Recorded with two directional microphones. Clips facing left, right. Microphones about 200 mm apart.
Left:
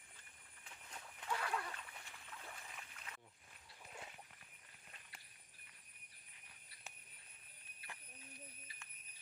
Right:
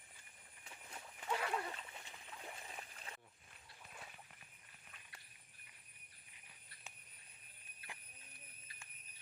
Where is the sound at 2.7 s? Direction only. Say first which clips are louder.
Right 3 dB; 30° right (ahead or behind).